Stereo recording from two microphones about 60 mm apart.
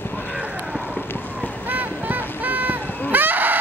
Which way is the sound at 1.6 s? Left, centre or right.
Right.